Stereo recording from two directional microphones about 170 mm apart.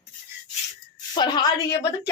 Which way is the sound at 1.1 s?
25° left (ahead or behind).